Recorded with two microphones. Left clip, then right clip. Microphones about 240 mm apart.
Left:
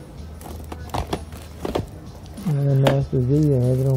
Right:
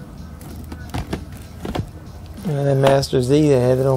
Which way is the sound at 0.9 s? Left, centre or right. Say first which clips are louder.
Left 3 dB; centre.